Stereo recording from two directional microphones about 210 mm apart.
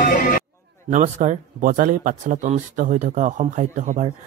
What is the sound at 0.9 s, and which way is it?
A man's voice, 35° right (ahead or behind).